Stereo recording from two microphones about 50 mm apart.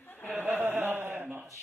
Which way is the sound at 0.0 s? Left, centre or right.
Left.